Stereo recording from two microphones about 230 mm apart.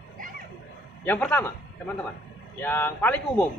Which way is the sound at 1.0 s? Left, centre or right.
Centre.